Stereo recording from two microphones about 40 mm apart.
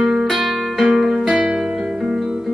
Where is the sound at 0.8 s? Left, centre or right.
Centre.